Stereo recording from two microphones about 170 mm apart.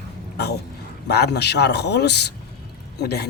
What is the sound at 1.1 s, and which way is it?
Speech, 75° left (ahead or behind).